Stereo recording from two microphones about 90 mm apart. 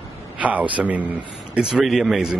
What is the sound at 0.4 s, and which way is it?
A man's voice, 15° right (ahead or behind).